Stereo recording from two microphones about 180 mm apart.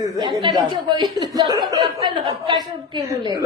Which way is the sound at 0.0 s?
20° right (ahead or behind).